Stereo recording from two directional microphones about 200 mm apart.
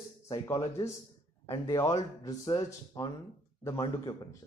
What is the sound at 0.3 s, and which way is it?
Speech, 15° left (ahead or behind).